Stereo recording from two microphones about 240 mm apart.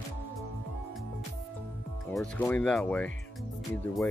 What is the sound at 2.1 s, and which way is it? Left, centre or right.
Speech, centre.